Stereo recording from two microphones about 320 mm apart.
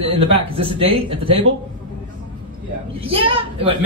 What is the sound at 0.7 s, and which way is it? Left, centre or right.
Speech, centre.